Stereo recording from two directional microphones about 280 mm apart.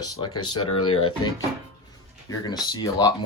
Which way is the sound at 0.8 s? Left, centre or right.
Left.